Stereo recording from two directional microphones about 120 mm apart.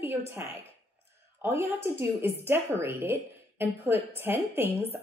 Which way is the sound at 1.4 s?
20° right (ahead or behind).